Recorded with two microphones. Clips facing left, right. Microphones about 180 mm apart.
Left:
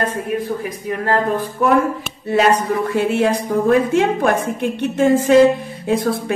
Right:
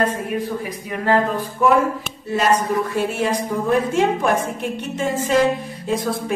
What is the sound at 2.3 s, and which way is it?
A woman's voice, 60° left (ahead or behind).